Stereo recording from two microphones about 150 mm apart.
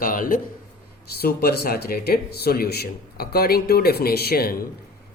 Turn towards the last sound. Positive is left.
turn(degrees=90)